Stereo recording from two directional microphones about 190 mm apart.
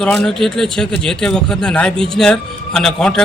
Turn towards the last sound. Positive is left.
turn(degrees=5)  # may be behind; listen again after turning